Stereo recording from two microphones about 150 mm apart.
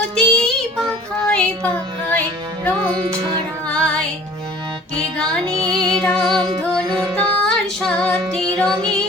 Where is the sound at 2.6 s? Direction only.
10° left (ahead or behind).